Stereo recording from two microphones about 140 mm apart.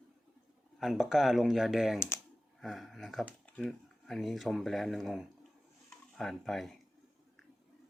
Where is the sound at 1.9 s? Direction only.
20° left (ahead or behind).